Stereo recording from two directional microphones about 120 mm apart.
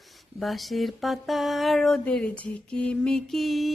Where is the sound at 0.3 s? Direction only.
Centre (ahead or behind).